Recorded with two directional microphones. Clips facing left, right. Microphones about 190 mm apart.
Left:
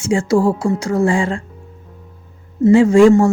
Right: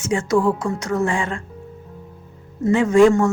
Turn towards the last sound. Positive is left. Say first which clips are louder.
# left 4 dB
turn(degrees=30)  # may be behind; listen again after turning